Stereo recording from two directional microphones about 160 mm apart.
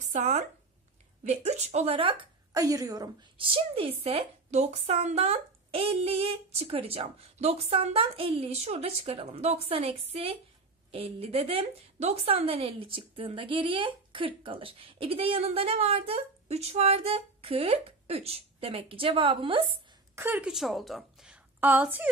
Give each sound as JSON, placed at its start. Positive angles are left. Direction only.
{"t": 0.0, "sound": "a sound", "side_deg": -45}
{"t": 1.2, "sound": "speech", "side_deg": -45}
{"t": 2.5, "sound": "a woman's voice", "side_deg": -20}
{"t": 20.2, "sound": "a woman's voice", "side_deg": -10}